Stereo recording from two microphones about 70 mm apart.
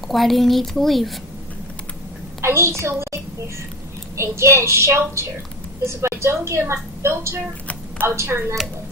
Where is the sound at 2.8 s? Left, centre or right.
Right.